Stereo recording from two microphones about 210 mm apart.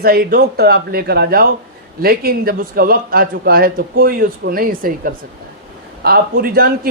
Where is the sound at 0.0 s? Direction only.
45° right (ahead or behind).